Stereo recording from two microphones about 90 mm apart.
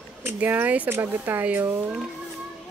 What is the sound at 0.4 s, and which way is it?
Speech, 20° right (ahead or behind).